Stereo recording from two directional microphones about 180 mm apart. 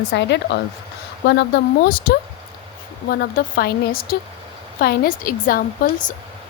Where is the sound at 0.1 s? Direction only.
70° left (ahead or behind); by 5.6 s 50° left (ahead or behind).